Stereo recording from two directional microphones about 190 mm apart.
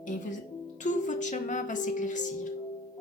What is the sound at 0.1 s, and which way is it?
A woman's voice, 40° left (ahead or behind).